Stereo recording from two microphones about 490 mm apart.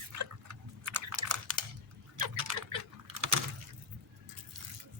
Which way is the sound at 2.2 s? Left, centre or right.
Right.